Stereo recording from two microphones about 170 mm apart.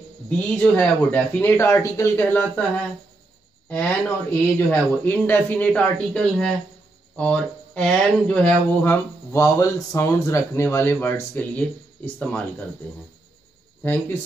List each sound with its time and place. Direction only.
0.3 s speech: 5° left (ahead or behind)